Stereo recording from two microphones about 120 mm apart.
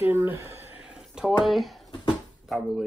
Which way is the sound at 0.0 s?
15° right (ahead or behind).